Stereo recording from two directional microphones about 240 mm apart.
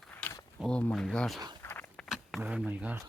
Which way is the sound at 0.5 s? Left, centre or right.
Centre.